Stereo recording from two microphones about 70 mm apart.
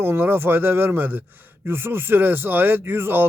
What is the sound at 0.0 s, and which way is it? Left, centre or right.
Speech, right.